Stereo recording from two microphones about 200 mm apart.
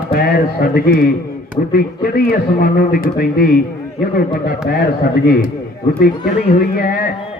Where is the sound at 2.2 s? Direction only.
50° left (ahead or behind).